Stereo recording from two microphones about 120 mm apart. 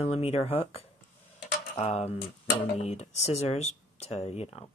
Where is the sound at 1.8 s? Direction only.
60° left (ahead or behind).